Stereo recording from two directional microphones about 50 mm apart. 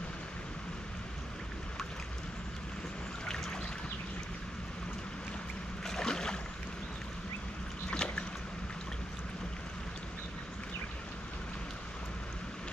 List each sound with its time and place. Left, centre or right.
5.9 s boat: centre
7.9 s boat: centre